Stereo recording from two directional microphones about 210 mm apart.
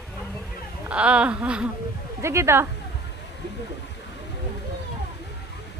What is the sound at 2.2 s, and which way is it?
Speech, 15° right (ahead or behind).